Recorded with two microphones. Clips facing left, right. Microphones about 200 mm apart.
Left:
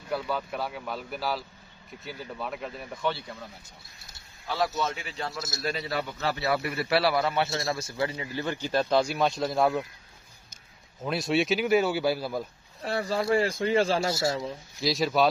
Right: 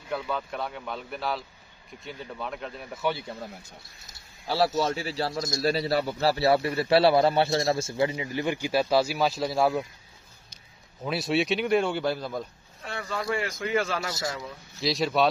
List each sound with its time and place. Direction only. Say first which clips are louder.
0.1 s a man's voice: left 1 dB; 5° left (ahead or behind)
4.7 s a man's voice: right 5 dB; 30° right (ahead or behind); by 9.8 s centre (ahead or behind)
11.0 s a man's voice: even; centre (ahead or behind)
12.8 s speech: left 4 dB; 35° left (ahead or behind)
14.8 s a man's voice: even; centre (ahead or behind)